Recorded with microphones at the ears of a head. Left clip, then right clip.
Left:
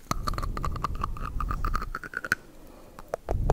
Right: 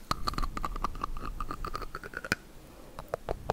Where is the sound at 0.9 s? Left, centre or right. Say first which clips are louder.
Left 3 dB; left.